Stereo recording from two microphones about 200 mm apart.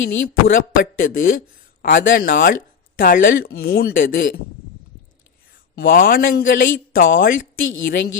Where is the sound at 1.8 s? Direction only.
45° left (ahead or behind).